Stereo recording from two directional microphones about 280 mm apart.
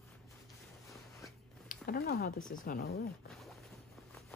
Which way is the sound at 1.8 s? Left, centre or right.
Left.